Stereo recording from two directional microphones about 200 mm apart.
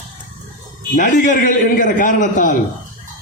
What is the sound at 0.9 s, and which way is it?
A man's voice, 40° left (ahead or behind).